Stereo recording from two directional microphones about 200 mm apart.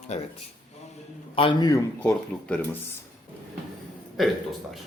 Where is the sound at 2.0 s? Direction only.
5° left (ahead or behind).